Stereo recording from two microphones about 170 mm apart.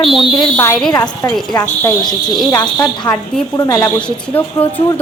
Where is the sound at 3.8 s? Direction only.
5° left (ahead or behind).